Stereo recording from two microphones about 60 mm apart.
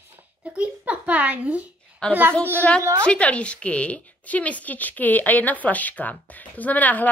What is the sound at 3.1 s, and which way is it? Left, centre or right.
Speech, left.